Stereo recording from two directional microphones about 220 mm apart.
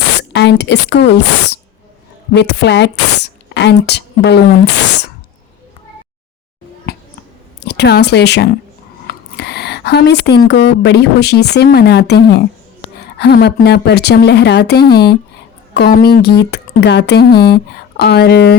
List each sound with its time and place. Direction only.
0.2 s a woman's voice: 50° left (ahead or behind)
7.6 s speech: 50° left (ahead or behind)